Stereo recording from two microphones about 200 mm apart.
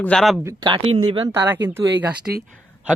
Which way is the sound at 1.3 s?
10° right (ahead or behind).